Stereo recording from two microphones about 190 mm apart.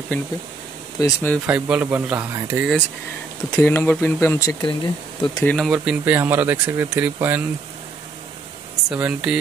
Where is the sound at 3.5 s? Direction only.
10° left (ahead or behind).